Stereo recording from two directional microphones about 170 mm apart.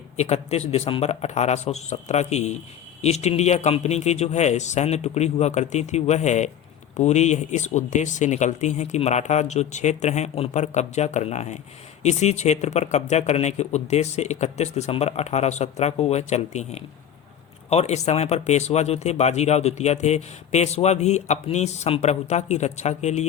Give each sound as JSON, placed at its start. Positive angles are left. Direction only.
{"t": 0.2, "sound": "speech", "side_deg": 40}